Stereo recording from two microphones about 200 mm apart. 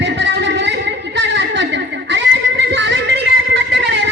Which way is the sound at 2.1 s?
60° right (ahead or behind).